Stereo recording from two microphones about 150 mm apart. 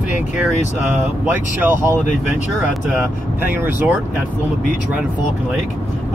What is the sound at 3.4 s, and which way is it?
Speech, 15° right (ahead or behind).